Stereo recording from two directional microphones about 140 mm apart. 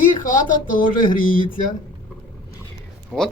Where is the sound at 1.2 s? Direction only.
75° left (ahead or behind).